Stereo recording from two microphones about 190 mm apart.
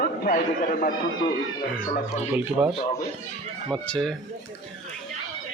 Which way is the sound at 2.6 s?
10° right (ahead or behind).